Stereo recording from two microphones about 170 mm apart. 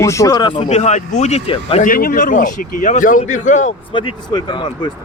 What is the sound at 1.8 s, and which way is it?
A man's voice, 55° left (ahead or behind).